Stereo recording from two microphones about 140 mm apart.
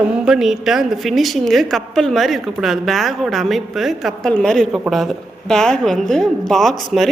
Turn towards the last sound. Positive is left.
turn(degrees=0)  # may be behind; listen again after turning